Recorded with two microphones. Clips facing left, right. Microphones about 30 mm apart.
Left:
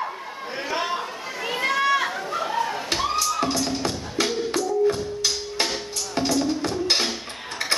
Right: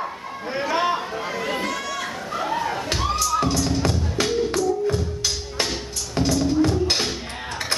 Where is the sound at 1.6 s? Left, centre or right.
Left.